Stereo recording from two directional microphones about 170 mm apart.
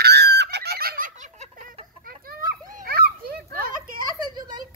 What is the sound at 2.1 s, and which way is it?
Children playing, 60° right (ahead or behind).